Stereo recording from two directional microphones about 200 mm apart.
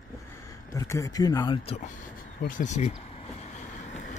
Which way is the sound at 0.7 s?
15° left (ahead or behind).